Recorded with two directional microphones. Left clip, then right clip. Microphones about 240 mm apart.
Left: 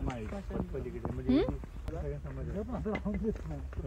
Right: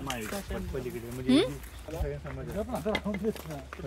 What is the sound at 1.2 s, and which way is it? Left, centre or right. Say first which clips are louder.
Speech: right 5 dB; right.